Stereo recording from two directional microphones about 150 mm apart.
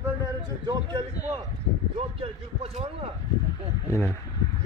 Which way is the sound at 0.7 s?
30° right (ahead or behind).